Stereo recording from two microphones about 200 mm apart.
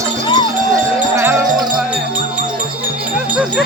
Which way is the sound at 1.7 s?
5° right (ahead or behind).